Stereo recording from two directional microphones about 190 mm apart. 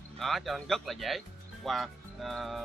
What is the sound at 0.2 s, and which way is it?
Speech, centre (ahead or behind).